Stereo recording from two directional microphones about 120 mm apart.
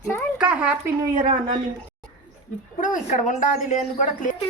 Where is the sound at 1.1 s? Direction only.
90° right.